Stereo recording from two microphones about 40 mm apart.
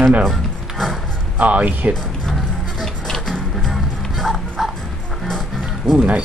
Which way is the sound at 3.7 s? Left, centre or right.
Centre.